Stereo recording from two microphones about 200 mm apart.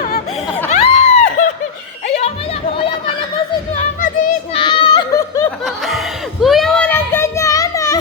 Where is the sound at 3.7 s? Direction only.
40° left (ahead or behind).